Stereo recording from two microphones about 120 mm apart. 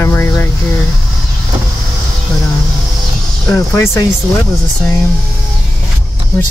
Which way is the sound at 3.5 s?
25° left (ahead or behind).